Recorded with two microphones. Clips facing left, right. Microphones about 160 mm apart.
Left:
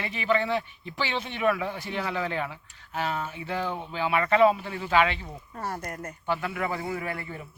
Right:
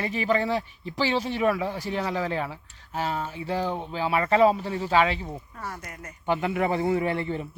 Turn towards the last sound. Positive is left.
turn(degrees=-25)  # may be behind; listen again after turning